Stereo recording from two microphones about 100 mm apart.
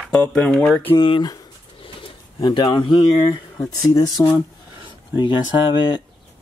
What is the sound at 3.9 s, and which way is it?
Speech, 40° left (ahead or behind).